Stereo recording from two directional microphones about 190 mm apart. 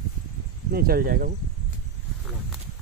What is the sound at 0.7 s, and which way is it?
Speech, 50° right (ahead or behind).